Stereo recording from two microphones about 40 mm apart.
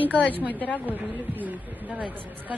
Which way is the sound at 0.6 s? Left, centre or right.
Left.